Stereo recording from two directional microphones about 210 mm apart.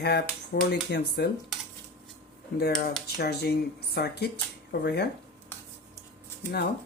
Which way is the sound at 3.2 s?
50° left (ahead or behind).